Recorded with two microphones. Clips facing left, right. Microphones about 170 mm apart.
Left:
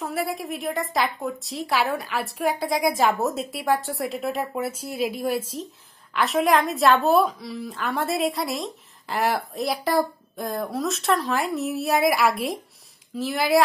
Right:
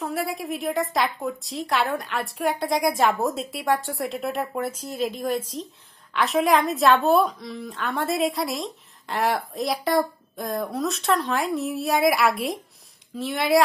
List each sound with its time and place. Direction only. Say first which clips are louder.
0.0 s a woman's voice: even; centre (ahead or behind)